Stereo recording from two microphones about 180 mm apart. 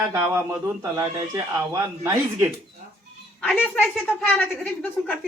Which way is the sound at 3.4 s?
Centre (ahead or behind).